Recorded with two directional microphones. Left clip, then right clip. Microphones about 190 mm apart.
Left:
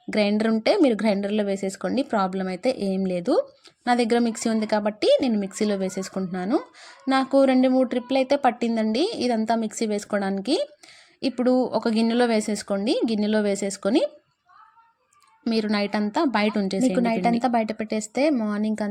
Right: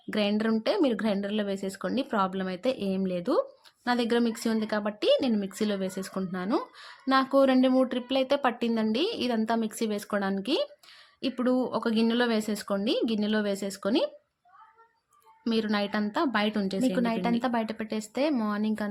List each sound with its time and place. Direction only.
0.1 s speech: 15° left (ahead or behind)
15.5 s speech: 20° left (ahead or behind)